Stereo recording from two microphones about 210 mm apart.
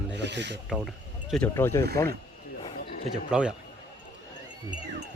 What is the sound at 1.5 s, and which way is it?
Speech, 15° left (ahead or behind).